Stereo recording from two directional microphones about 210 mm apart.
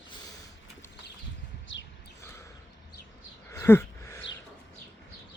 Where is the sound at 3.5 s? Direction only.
10° left (ahead or behind).